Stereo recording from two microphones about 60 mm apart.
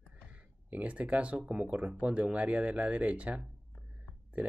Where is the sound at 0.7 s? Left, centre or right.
Right.